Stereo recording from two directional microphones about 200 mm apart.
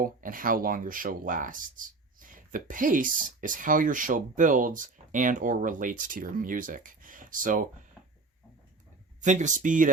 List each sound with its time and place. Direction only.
0.0 s speech: 45° right (ahead or behind)
9.2 s speech: 35° right (ahead or behind)